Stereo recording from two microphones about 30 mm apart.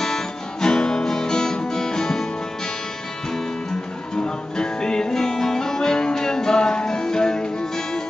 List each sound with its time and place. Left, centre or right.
0.0 s music: left
4.2 s music: left